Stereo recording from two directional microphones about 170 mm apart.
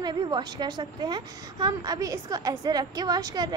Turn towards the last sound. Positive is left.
turn(degrees=-25)  # may be behind; listen again after turning